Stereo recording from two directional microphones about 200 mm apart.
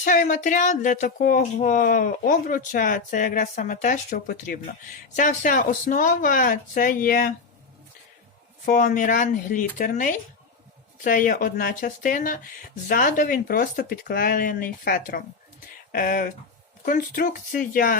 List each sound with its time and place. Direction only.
0.0 s speech: 40° left (ahead or behind)
8.6 s speech: 40° left (ahead or behind)